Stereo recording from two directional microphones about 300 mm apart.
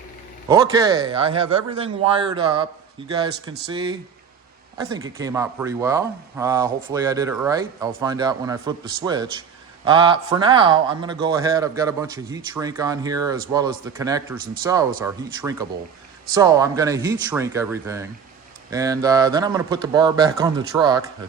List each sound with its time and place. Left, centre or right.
0.4 s speech: centre